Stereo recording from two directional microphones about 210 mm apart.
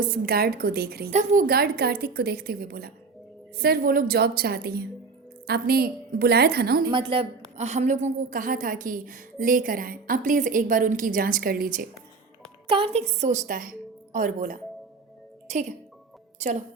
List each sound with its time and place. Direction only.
0.0 s a woman's voice: 45° right (ahead or behind)
6.9 s a woman's voice: 25° right (ahead or behind); by 11.9 s 45° right (ahead or behind)
12.6 s a woman's voice: 25° right (ahead or behind)